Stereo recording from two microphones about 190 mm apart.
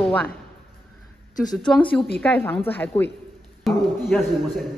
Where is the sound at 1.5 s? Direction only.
Centre (ahead or behind).